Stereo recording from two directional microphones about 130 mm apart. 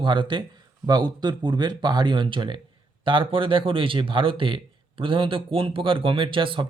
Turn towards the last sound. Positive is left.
turn(degrees=-40)  # may be behind; listen again after turning